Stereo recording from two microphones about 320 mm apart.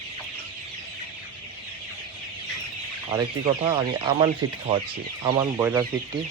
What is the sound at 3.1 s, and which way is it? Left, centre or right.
Speech, centre.